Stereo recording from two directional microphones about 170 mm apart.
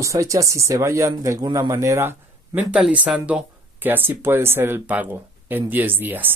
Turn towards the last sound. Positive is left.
turn(degrees=-10)  # may be behind; listen again after turning